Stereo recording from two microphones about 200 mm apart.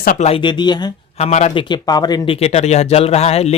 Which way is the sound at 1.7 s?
20° left (ahead or behind).